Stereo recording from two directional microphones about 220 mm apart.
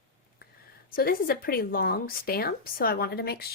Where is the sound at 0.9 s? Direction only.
40° left (ahead or behind).